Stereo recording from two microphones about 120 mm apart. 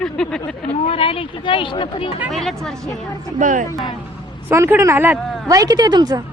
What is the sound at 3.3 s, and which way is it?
Speech, 90° right.